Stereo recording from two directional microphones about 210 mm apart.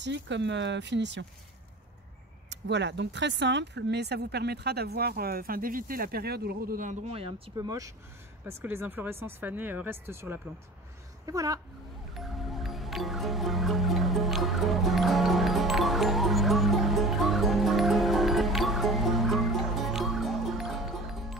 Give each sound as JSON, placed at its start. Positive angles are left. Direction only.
{"t": 0.0, "sound": "speech", "side_deg": -55}
{"t": 2.5, "sound": "speech", "side_deg": -55}
{"t": 12.1, "sound": "music", "side_deg": 0}